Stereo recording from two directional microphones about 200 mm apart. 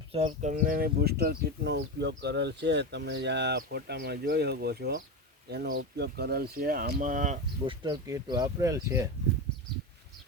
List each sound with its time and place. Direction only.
0.1 s speech: 30° right (ahead or behind)
7.7 s speech: 20° right (ahead or behind)